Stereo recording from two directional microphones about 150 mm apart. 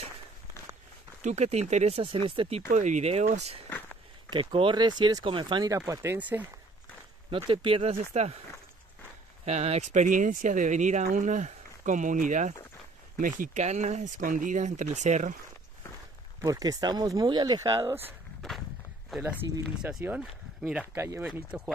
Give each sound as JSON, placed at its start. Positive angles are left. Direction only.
{"t": 1.2, "sound": "speech", "side_deg": -45}
{"t": 2.7, "sound": "speech", "side_deg": -50}
{"t": 4.3, "sound": "speech", "side_deg": -35}
{"t": 5.8, "sound": "speech", "side_deg": -15}
{"t": 7.2, "sound": "speech", "side_deg": -35}
{"t": 9.4, "sound": "speech", "side_deg": -45}
{"t": 16.3, "sound": "speech", "side_deg": -25}
{"t": 19.0, "sound": "speech", "side_deg": -5}
{"t": 19.8, "sound": "speech", "side_deg": -15}